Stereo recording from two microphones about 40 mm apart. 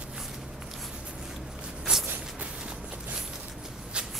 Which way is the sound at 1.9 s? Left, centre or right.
Right.